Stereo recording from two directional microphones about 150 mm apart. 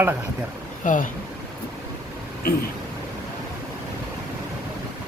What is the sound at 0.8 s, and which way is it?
Speech, 60° left (ahead or behind).